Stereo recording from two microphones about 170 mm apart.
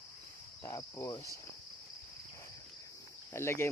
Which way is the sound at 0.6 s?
15° left (ahead or behind).